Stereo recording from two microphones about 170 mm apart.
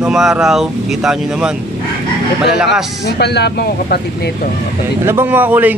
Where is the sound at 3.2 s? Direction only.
75° left (ahead or behind).